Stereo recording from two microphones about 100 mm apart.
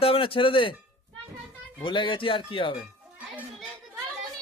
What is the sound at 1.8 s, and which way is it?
Speech, 55° left (ahead or behind).